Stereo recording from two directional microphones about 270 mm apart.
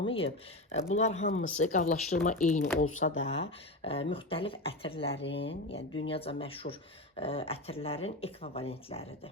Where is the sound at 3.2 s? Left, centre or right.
Left.